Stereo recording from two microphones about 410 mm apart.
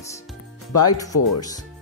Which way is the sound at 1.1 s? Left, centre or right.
Left.